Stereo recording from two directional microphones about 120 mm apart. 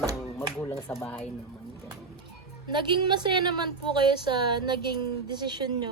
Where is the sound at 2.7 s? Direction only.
40° right (ahead or behind).